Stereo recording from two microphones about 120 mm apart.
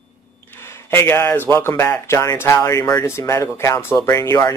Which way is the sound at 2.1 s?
25° left (ahead or behind).